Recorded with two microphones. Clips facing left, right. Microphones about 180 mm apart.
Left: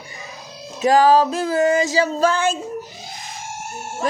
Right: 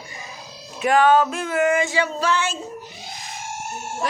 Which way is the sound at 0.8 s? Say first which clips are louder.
Left 2 dB; 35° left (ahead or behind).